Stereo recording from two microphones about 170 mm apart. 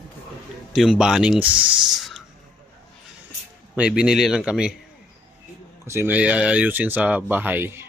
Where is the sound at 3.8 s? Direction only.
5° right (ahead or behind).